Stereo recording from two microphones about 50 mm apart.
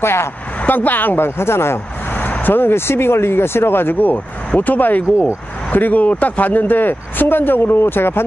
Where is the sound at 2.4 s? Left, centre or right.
Left.